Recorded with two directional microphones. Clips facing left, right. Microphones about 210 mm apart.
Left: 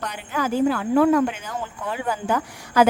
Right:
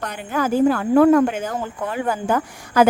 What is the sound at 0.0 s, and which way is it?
A woman's voice, 50° right (ahead or behind).